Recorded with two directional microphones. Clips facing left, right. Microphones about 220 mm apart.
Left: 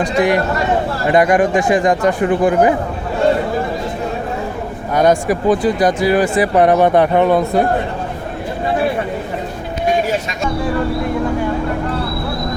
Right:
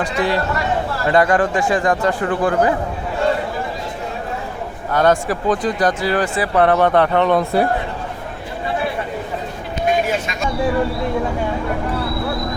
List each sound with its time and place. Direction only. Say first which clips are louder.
0.0 s speech: left 5 dB; 15° left (ahead or behind)
4.9 s speech: left 3 dB; 15° left (ahead or behind)
7.3 s a man's voice: left 2 dB; 5° right (ahead or behind)